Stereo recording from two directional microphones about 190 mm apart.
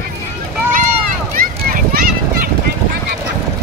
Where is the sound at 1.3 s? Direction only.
50° right (ahead or behind).